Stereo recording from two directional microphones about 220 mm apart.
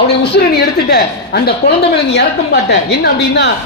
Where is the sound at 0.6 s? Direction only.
45° left (ahead or behind).